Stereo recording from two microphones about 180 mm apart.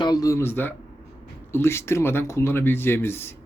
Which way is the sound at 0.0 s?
20° left (ahead or behind).